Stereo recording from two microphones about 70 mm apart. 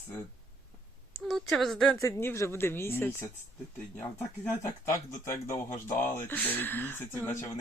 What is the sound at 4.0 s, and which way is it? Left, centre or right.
Speech, left.